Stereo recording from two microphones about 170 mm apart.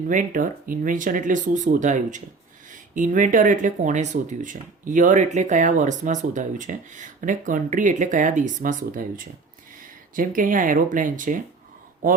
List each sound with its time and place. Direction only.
0.1 s speech: 50° right (ahead or behind)